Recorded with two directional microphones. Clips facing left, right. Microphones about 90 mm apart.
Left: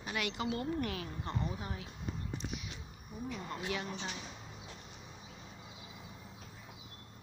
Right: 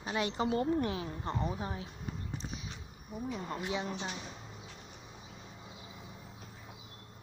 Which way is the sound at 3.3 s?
15° right (ahead or behind).